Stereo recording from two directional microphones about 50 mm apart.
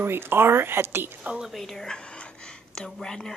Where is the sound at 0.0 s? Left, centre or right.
Right.